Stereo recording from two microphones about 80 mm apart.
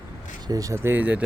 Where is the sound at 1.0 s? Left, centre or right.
Centre.